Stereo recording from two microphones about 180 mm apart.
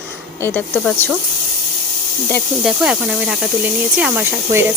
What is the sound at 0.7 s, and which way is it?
Speech, 5° left (ahead or behind).